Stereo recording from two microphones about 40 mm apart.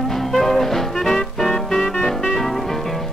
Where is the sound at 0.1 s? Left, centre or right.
Centre.